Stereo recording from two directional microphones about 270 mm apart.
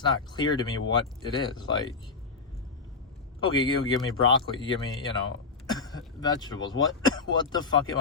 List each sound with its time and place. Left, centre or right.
0.1 s speech: centre
3.4 s speech: centre
6.1 s speech: centre